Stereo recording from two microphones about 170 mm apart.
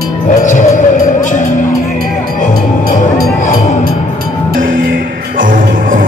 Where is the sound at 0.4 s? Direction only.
50° left (ahead or behind).